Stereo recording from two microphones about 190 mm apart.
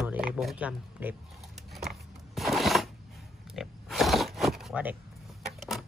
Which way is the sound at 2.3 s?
Centre (ahead or behind).